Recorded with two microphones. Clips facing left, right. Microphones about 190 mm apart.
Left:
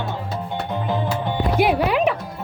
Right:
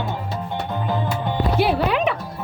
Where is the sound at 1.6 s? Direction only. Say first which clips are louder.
Left 2 dB; 15° left (ahead or behind).